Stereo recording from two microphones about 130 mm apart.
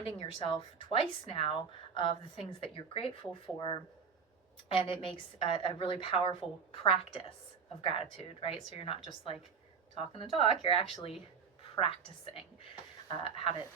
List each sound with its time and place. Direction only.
0.0 s a woman's voice: 45° left (ahead or behind)